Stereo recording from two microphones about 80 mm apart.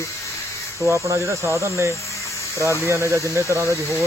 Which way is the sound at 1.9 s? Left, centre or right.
Left.